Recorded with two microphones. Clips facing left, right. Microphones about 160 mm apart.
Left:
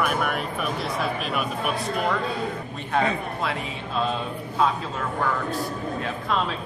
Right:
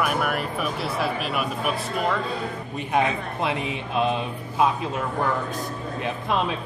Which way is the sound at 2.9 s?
20° right (ahead or behind).